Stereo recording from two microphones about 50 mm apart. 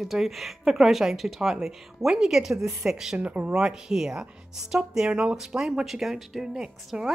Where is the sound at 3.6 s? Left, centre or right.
Centre.